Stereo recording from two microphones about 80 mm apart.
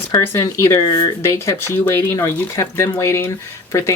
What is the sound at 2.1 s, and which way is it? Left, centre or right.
Speech, left.